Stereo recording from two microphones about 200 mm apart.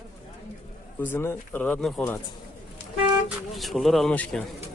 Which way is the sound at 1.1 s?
10° left (ahead or behind).